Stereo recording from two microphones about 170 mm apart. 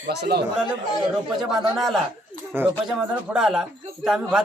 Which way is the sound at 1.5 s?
Centre (ahead or behind).